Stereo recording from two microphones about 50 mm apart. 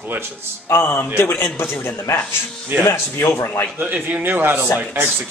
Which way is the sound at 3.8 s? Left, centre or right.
Right.